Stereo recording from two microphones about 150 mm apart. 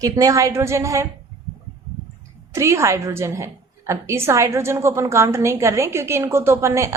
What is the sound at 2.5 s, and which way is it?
A woman's voice, 20° right (ahead or behind).